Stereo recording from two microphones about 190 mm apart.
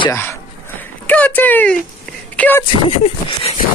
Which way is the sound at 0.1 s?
10° left (ahead or behind).